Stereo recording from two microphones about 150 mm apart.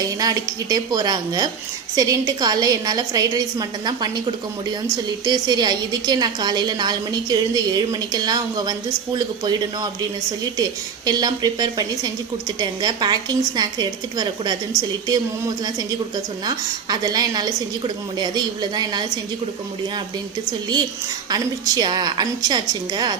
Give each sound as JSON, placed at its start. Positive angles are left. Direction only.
{"t": 0.0, "sound": "a woman's voice", "side_deg": -25}
{"t": 21.2, "sound": "a woman's voice", "side_deg": -25}